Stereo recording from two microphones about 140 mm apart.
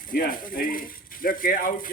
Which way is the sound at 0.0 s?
85° left.